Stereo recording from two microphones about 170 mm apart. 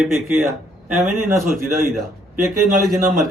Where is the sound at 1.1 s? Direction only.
15° right (ahead or behind).